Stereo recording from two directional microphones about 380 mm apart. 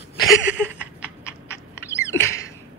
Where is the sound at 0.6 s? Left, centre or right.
Centre.